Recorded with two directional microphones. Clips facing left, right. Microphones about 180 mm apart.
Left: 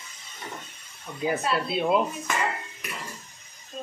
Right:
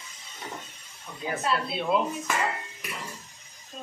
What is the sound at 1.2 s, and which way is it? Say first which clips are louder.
Speech: left 3 dB; 15° left (ahead or behind).